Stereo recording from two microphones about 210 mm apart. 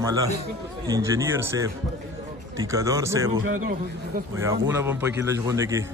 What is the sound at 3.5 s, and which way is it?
Speech, 40° right (ahead or behind).